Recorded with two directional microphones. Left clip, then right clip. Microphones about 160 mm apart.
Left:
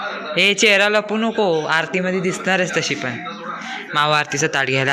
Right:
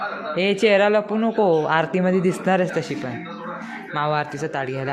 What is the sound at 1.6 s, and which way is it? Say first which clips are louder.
A man's voice: left 1 dB; 20° right (ahead or behind).